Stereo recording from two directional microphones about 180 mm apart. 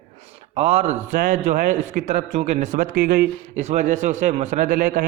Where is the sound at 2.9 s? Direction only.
60° right (ahead or behind).